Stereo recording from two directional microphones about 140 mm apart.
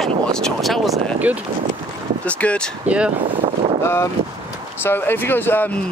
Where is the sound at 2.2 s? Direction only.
10° left (ahead or behind).